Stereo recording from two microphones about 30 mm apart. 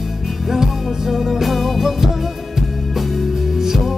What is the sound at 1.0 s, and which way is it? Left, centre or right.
Music, centre.